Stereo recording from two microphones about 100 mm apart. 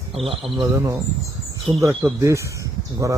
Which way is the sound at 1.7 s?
70° right (ahead or behind).